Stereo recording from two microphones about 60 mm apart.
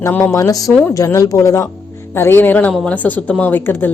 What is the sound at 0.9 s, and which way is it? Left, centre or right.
Speech, left.